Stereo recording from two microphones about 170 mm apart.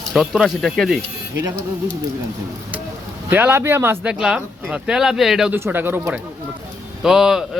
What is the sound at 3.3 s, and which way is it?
A man's voice, 10° right (ahead or behind).